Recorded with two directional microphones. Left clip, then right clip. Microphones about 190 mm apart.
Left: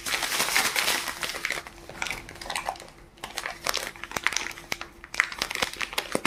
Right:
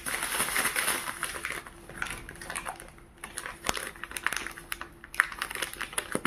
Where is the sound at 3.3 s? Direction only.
20° right (ahead or behind).